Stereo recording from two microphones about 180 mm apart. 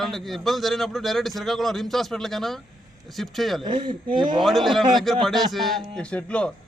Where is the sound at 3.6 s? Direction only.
25° right (ahead or behind).